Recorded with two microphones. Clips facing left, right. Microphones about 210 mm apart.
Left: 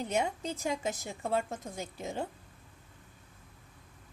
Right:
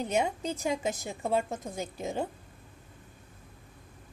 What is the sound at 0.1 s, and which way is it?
A woman's voice, 20° right (ahead or behind).